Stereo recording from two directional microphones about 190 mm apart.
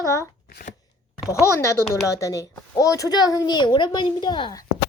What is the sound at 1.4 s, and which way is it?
A child's voice, 15° left (ahead or behind).